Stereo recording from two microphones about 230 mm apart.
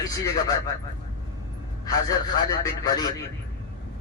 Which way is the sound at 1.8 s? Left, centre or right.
Centre.